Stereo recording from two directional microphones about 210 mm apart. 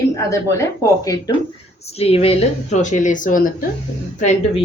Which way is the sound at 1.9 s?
30° left (ahead or behind).